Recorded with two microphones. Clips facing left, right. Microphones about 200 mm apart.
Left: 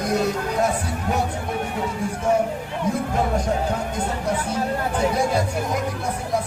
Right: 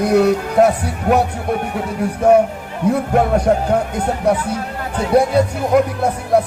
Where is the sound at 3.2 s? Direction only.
65° right (ahead or behind).